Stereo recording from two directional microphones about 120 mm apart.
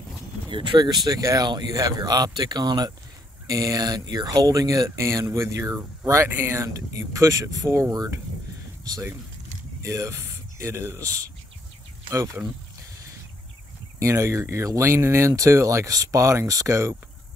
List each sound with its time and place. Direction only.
0.5 s speech: 45° right (ahead or behind)
9.8 s speech: 25° right (ahead or behind)
13.9 s speech: 25° right (ahead or behind)